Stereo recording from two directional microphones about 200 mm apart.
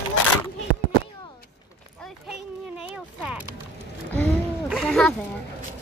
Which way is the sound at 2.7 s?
5° right (ahead or behind).